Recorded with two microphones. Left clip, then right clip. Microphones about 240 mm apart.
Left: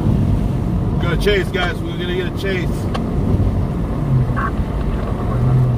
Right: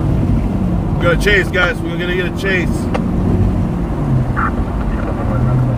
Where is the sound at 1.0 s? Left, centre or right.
Right.